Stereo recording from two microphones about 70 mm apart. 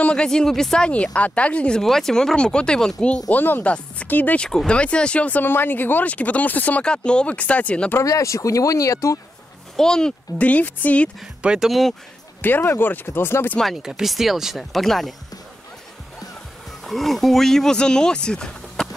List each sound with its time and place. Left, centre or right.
0.0 s speech: centre
1.8 s speech: centre
3.3 s speech: left
4.5 s speech: centre
8.0 s speech: left
9.8 s speech: centre
10.3 s speech: left
11.4 s speech: centre
12.4 s speech: left
13.8 s speech: centre
16.8 s speech: centre